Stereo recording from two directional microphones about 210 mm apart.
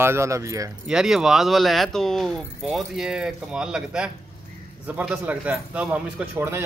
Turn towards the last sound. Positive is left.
turn(degrees=-10)  # may be behind; listen again after turning